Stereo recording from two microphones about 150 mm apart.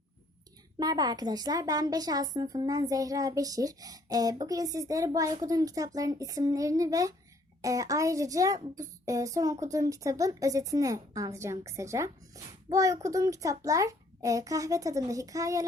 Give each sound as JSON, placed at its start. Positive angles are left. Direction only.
{"t": 0.8, "sound": "a child's voice", "side_deg": -25}